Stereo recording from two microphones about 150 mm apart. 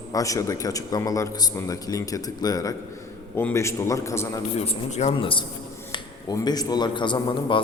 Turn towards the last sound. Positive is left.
turn(degrees=35)  # may be behind; listen again after turning